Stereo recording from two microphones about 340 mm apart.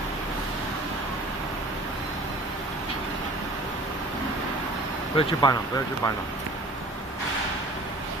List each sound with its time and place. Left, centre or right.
5.1 s speech: centre